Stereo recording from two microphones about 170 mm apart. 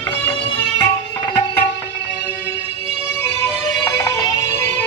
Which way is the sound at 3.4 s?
20° left (ahead or behind).